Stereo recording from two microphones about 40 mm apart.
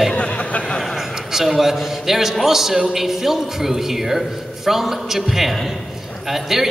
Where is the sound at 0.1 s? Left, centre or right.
Left.